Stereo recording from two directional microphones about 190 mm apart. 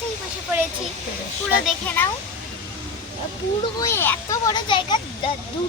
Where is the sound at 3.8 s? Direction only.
10° left (ahead or behind).